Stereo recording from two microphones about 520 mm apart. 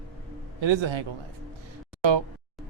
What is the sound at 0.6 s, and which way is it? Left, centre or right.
Speech, right.